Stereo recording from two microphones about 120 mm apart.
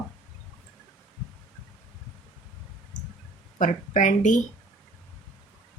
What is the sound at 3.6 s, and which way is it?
Speech, 90° left.